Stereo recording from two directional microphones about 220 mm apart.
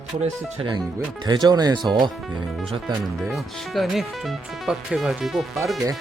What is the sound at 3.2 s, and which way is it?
Speech, centre (ahead or behind).